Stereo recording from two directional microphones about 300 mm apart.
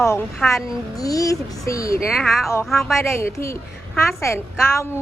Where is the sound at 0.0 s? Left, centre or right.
Centre.